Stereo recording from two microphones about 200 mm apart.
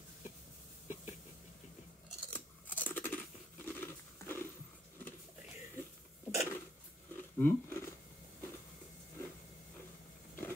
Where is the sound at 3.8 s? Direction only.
10° left (ahead or behind).